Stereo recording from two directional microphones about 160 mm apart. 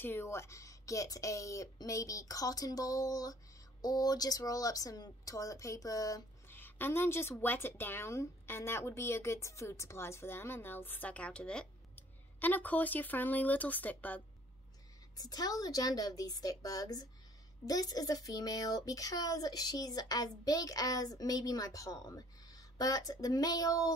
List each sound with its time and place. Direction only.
0.0 s speech: 15° left (ahead or behind)
15.1 s speech: 25° left (ahead or behind)